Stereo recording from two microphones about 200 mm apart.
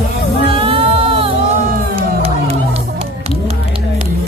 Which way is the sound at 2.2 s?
30° right (ahead or behind).